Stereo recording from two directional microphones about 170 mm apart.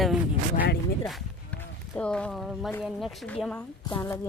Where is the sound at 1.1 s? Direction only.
5° left (ahead or behind).